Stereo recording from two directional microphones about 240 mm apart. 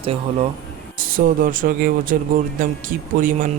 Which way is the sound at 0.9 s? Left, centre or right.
Right.